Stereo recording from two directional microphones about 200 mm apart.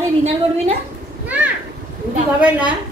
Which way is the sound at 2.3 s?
5° right (ahead or behind).